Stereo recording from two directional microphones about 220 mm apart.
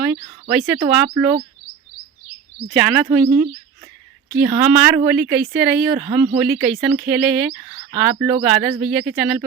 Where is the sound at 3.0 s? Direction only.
5° right (ahead or behind).